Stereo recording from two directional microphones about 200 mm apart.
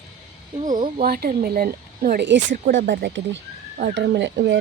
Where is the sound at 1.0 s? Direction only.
50° right (ahead or behind).